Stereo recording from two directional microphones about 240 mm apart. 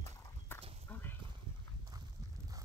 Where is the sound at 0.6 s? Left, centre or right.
Right.